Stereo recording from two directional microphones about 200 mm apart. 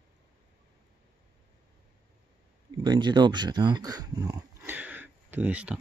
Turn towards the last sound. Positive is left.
turn(degrees=-5)  # may be behind; listen again after turning